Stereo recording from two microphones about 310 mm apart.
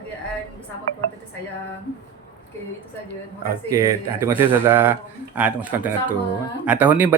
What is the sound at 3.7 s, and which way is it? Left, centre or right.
A man's voice, centre.